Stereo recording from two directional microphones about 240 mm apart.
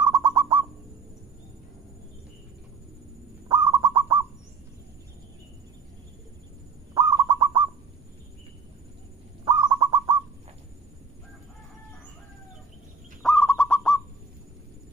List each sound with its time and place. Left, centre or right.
0.0 s bird: centre
3.4 s bird: centre
6.9 s owl: centre
9.4 s bird: centre
13.2 s bird: centre